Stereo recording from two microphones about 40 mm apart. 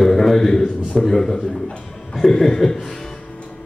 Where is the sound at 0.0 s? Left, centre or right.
Centre.